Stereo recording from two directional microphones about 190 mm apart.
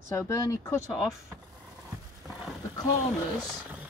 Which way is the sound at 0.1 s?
15° left (ahead or behind).